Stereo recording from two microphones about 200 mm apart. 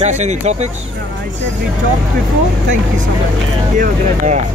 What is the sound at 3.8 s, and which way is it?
Speech, 40° right (ahead or behind).